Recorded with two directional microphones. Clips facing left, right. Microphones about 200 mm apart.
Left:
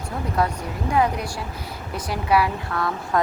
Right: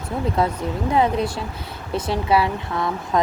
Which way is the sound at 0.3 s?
25° right (ahead or behind).